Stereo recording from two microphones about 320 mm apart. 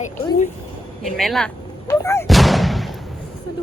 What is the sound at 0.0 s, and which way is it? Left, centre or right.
Speech, left.